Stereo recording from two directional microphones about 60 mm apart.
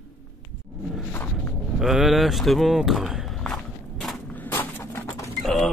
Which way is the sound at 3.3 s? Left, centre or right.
Centre.